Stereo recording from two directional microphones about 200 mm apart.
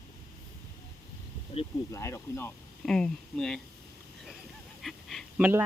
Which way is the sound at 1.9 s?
15° left (ahead or behind).